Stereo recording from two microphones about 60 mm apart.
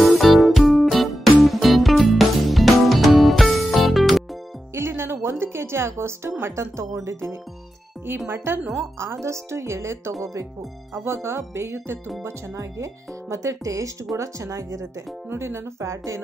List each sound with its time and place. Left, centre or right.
0.0 s music: centre
4.7 s music: right
6.4 s a woman's voice: right
9.0 s a woman's voice: right
11.2 s a woman's voice: right
12.3 s speech: right
15.2 s a woman's voice: right